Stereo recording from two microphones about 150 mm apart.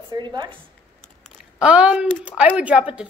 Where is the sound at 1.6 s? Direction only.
5° right (ahead or behind).